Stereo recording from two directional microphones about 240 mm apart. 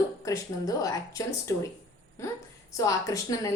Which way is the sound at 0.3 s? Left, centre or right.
Centre.